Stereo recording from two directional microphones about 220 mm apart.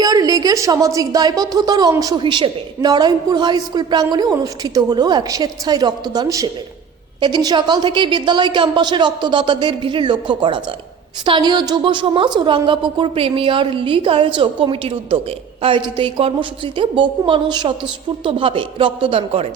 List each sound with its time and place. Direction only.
0.0 s a woman's voice: 15° right (ahead or behind)